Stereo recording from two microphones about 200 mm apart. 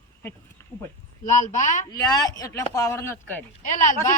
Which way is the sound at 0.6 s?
10° left (ahead or behind).